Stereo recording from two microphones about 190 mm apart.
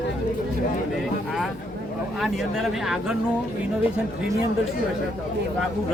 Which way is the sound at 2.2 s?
Centre (ahead or behind).